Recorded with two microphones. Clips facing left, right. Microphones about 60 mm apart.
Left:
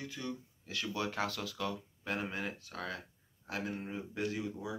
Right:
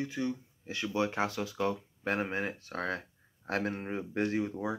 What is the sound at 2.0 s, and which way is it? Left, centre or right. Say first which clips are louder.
Speech: right 6 dB; right.